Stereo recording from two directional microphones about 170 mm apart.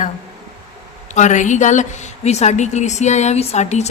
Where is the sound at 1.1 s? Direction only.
45° left (ahead or behind).